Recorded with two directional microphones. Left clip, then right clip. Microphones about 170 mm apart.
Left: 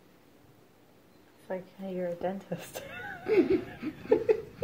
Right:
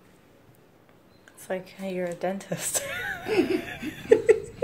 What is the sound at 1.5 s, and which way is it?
A woman's voice, 30° right (ahead or behind).